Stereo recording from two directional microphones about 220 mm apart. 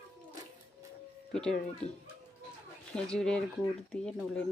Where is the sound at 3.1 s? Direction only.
5° left (ahead or behind).